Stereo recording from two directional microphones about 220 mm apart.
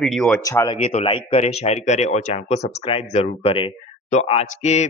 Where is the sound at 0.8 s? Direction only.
25° left (ahead or behind).